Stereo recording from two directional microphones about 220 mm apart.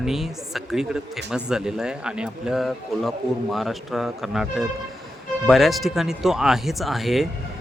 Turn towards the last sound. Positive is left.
turn(degrees=0)  # may be behind; listen again after turning